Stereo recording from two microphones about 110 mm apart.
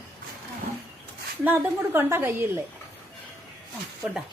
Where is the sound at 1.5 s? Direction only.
20° right (ahead or behind).